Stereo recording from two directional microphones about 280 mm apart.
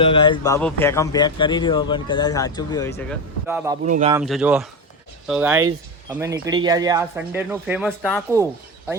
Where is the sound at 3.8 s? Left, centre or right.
Right.